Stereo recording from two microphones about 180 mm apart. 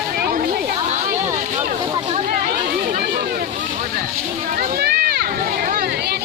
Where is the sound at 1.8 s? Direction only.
30° right (ahead or behind).